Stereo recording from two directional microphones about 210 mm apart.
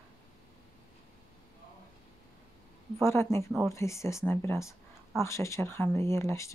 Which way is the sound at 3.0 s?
10° left (ahead or behind).